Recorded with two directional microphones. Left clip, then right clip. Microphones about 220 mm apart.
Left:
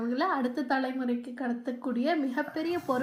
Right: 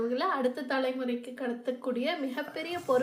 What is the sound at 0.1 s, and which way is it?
Speech, 20° right (ahead or behind).